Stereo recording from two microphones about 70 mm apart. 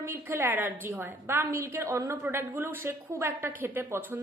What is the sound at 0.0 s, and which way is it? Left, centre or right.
A woman's voice, right.